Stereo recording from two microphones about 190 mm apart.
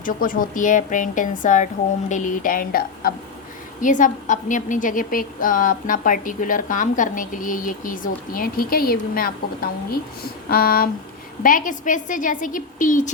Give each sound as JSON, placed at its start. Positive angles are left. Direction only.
{"t": 0.0, "sound": "a woman's voice", "side_deg": 45}